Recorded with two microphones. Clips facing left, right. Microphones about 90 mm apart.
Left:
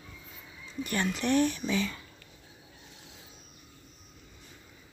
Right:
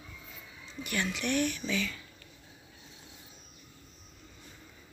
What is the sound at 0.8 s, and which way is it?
Speech, 35° left (ahead or behind).